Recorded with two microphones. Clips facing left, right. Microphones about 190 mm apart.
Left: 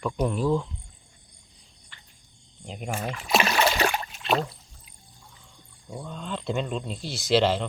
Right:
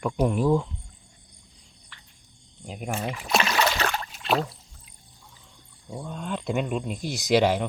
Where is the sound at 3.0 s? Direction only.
15° right (ahead or behind).